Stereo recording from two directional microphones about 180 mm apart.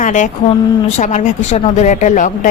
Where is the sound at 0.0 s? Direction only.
45° left (ahead or behind).